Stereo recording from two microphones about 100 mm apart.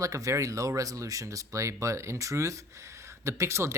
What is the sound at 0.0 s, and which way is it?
Speech, 30° right (ahead or behind).